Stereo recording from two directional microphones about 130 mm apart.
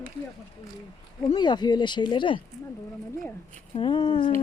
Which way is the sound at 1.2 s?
35° left (ahead or behind).